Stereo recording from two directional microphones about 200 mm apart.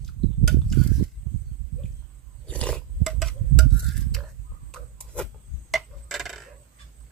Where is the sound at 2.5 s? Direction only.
5° left (ahead or behind).